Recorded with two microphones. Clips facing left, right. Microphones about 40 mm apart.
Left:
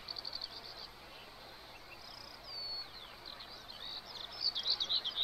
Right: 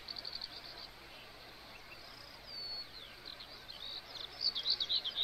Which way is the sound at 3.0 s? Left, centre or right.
Centre.